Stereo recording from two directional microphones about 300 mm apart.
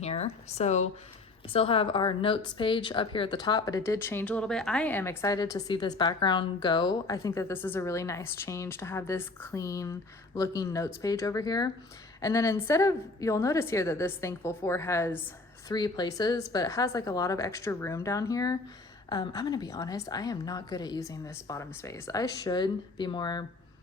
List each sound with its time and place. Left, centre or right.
0.0 s speech: left